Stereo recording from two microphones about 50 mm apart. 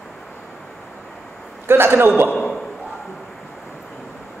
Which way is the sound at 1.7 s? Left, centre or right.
Right.